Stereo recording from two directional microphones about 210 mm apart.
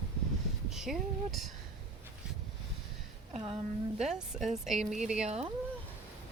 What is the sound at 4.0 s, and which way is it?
Speech, 5° right (ahead or behind).